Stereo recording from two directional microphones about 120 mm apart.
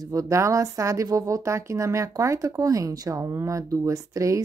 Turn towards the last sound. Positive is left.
turn(degrees=-25)  # may be behind; listen again after turning